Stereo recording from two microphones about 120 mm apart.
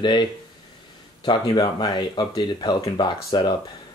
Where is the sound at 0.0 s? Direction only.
40° left (ahead or behind).